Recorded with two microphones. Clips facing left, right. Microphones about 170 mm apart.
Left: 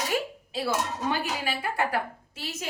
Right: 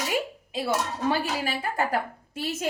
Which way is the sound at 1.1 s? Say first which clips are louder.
Right 2 dB; 40° right (ahead or behind).